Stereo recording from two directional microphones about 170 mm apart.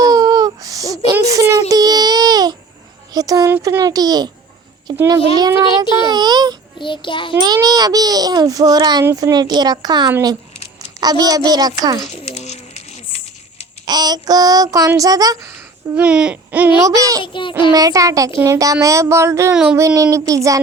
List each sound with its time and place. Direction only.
0.0 s a sound: 25° right (ahead or behind)
1.7 s baby cry: 25° right (ahead or behind)
3.1 s a child's voice: 20° right (ahead or behind)
6.7 s a child's voice: 30° left (ahead or behind)
7.3 s a child's voice: 25° right (ahead or behind)
12.0 s pigeon: 40° left (ahead or behind)
13.8 s a child's voice: 25° right (ahead or behind)
16.0 s a child's voice: 5° right (ahead or behind)
17.2 s a child's voice: 30° left (ahead or behind)
17.7 s a child's voice: 20° right (ahead or behind)